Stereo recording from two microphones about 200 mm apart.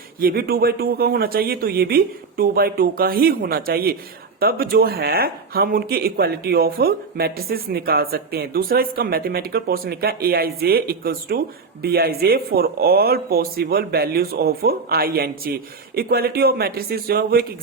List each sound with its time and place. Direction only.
0.2 s speech: 45° right (ahead or behind)